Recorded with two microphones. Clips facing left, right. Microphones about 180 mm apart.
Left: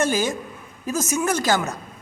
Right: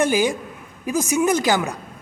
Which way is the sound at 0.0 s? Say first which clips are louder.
Right 3 dB; 15° right (ahead or behind).